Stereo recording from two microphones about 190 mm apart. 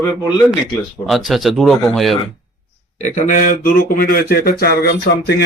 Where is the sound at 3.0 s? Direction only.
40° left (ahead or behind).